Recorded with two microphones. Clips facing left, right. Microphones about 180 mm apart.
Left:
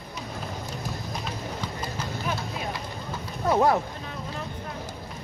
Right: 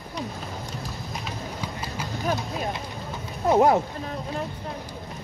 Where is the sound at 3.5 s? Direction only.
20° right (ahead or behind).